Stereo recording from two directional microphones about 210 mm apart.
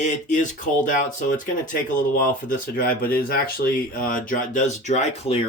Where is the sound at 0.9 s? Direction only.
40° left (ahead or behind).